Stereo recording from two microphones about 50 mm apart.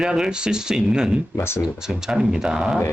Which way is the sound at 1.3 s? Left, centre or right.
Left.